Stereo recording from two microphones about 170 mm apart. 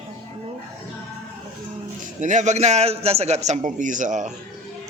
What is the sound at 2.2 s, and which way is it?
A man's voice, 45° right (ahead or behind).